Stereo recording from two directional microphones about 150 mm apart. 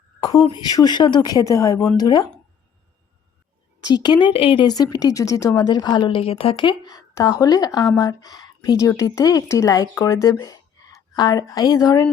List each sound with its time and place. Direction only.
0.2 s a sound: 25° left (ahead or behind)
0.4 s speech: 30° left (ahead or behind)
3.8 s speech: 30° left (ahead or behind)